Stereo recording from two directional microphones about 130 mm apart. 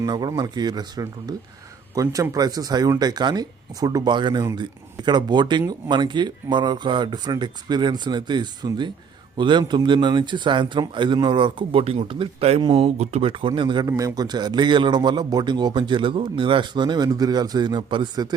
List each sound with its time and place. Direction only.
0.0 s a man's voice: 30° right (ahead or behind)